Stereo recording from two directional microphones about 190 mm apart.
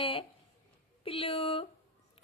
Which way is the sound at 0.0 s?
30° left (ahead or behind).